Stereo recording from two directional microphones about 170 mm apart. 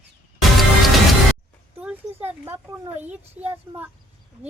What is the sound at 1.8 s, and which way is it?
Speech, 10° right (ahead or behind).